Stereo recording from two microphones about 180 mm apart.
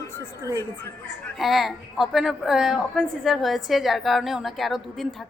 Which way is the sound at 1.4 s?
Centre (ahead or behind).